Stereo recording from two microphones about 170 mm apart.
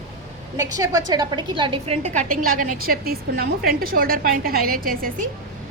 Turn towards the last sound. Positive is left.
turn(degrees=-55)  # may be behind; listen again after turning